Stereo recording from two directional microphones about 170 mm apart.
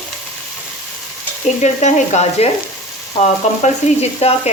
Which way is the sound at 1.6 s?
45° left (ahead or behind).